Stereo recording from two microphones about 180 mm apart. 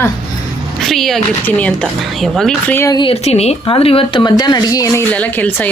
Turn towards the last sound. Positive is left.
turn(degrees=10)  # may be behind; listen again after turning